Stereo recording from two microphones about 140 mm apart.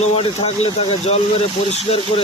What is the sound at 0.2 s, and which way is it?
Speech, 45° left (ahead or behind).